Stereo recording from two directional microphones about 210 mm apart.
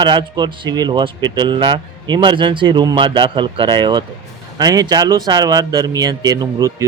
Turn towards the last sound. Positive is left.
turn(degrees=-15)  # may be behind; listen again after turning